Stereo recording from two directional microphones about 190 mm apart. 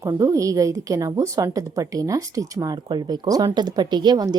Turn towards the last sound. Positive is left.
turn(degrees=-20)  # may be behind; listen again after turning